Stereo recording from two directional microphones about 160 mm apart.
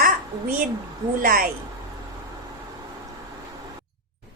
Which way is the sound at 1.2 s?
65° right (ahead or behind).